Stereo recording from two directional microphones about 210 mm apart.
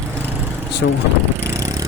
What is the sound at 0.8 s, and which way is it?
Speech, 55° left (ahead or behind).